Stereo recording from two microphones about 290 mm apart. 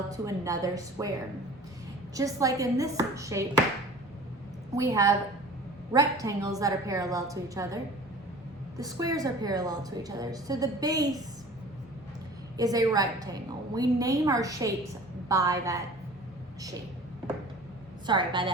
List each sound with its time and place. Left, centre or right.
0.1 s a woman's voice: centre
2.1 s a woman's voice: centre
4.7 s a woman's voice: centre
8.8 s a woman's voice: centre
12.5 s a woman's voice: centre
18.0 s a woman's voice: centre